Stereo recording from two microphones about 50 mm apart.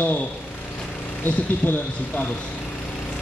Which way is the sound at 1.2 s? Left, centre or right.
Left.